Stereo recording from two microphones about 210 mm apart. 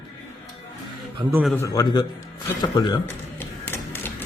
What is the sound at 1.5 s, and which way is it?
A man's voice, 15° left (ahead or behind).